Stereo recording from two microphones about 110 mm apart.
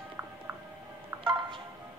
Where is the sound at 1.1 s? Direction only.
25° right (ahead or behind).